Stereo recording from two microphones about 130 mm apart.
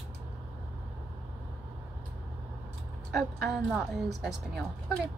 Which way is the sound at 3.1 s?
Centre (ahead or behind).